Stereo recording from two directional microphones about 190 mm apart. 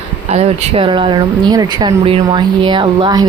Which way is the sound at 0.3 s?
35° right (ahead or behind).